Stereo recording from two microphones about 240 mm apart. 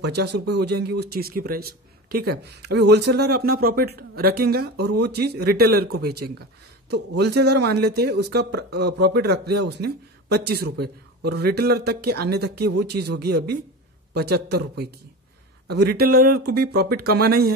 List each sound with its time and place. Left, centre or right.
0.0 s speech: right